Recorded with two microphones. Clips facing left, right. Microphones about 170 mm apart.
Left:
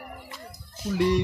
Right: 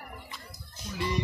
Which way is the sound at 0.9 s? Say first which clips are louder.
Left 9 dB; 70° left (ahead or behind).